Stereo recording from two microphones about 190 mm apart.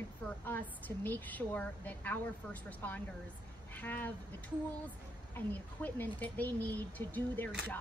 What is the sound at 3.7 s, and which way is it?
A woman's voice, 10° left (ahead or behind).